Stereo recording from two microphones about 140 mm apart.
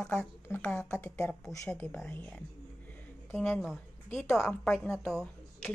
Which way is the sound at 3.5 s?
Centre (ahead or behind).